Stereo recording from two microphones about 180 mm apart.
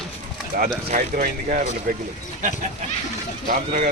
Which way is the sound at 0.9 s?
45° right (ahead or behind).